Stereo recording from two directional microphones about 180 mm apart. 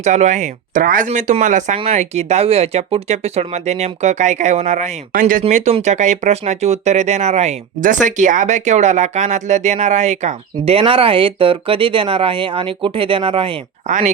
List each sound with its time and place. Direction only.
0.0 s speech: 40° right (ahead or behind)
13.8 s speech: 45° right (ahead or behind)